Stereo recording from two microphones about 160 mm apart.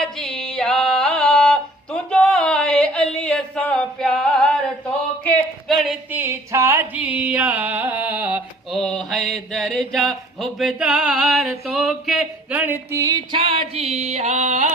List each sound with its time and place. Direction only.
0.0 s music: 5° left (ahead or behind)
5.2 s a sound: centre (ahead or behind)
8.7 s mantra: 5° left (ahead or behind); by 13.2 s 20° right (ahead or behind)
13.3 s music: 35° right (ahead or behind)